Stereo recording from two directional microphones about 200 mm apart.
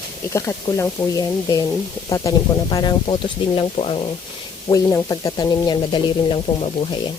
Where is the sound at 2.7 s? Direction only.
20° left (ahead or behind).